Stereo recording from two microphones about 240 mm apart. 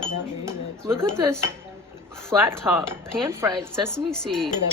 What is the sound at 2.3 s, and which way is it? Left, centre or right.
Speech, centre.